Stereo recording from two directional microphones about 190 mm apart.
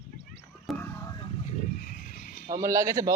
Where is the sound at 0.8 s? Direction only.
10° left (ahead or behind).